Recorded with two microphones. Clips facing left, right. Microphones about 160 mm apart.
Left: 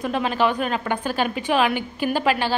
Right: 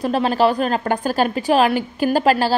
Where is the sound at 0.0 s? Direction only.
35° right (ahead or behind).